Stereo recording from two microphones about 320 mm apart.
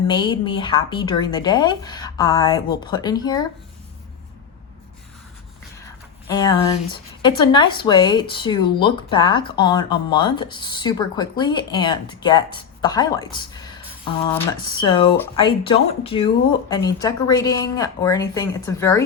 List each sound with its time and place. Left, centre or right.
0.1 s speech: centre
6.2 s speech: centre